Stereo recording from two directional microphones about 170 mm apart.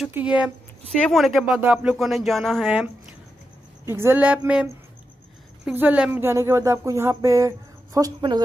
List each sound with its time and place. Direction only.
0.0 s speech: 5° right (ahead or behind)
5.7 s speech: 10° right (ahead or behind)